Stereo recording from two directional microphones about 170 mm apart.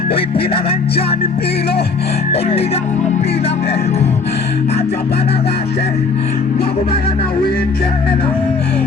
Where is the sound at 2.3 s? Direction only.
35° left (ahead or behind).